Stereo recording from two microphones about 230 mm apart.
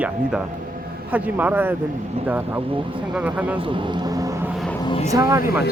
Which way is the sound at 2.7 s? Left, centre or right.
Right.